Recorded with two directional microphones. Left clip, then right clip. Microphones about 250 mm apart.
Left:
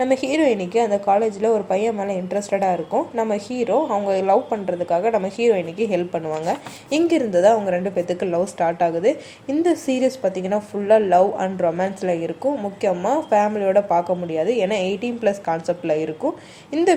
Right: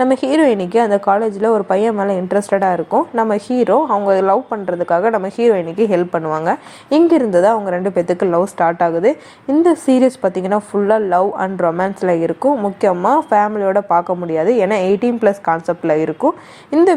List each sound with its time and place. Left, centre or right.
0.0 s speech: right